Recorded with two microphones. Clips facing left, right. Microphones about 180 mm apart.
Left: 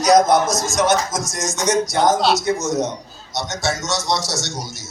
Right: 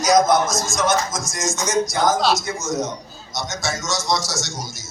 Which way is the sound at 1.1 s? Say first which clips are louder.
Left 1 dB; 40° left (ahead or behind).